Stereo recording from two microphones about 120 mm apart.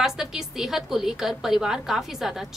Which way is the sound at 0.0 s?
5° right (ahead or behind).